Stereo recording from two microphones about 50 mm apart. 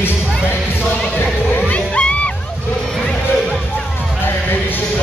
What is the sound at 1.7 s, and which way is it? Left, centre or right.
Music, left.